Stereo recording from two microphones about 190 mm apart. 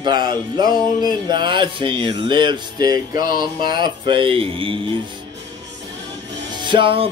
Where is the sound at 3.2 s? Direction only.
50° left (ahead or behind).